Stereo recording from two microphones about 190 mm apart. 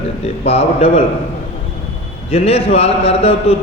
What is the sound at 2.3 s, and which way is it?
A man's voice, 30° left (ahead or behind).